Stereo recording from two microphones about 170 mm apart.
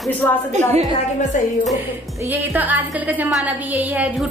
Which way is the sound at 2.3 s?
10° right (ahead or behind).